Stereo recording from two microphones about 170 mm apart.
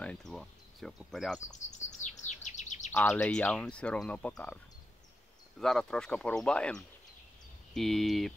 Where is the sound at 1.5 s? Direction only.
45° left (ahead or behind).